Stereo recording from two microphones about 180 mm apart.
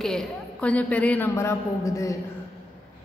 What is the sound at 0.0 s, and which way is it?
A woman's voice, 5° left (ahead or behind).